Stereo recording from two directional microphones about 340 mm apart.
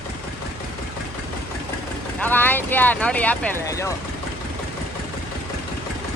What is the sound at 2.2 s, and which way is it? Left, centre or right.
Speech, centre.